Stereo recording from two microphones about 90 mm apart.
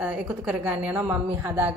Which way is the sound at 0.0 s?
15° right (ahead or behind).